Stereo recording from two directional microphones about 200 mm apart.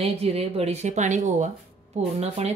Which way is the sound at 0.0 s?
30° right (ahead or behind).